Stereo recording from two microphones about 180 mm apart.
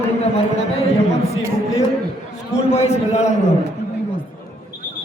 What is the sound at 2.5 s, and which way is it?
Speech, 35° left (ahead or behind).